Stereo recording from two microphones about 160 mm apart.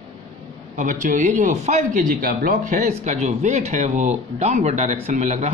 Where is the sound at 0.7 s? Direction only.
50° right (ahead or behind).